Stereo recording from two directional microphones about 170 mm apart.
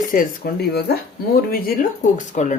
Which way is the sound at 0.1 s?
60° left (ahead or behind).